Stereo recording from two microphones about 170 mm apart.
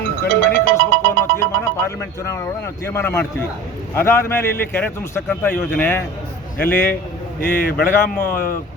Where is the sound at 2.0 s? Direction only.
15° left (ahead or behind).